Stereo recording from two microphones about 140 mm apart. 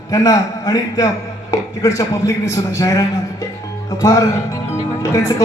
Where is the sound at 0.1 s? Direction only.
25° left (ahead or behind).